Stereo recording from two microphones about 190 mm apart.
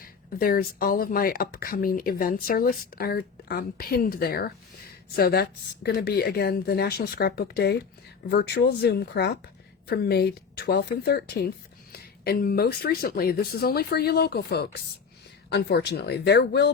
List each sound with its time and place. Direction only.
0.0 s a woman's voice: 50° left (ahead or behind)